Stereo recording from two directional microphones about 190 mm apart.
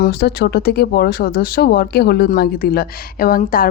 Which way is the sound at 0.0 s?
60° left (ahead or behind).